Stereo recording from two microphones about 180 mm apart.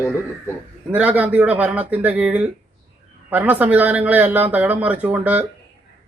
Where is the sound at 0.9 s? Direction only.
10° right (ahead or behind).